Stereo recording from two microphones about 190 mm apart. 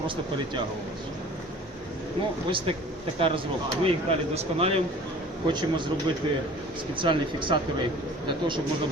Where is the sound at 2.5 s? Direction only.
25° right (ahead or behind).